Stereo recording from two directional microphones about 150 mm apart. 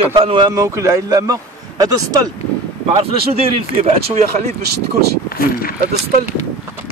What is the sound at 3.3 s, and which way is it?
Speech, 45° right (ahead or behind).